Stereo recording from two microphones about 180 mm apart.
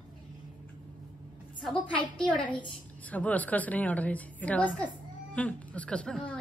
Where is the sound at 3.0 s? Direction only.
10° left (ahead or behind).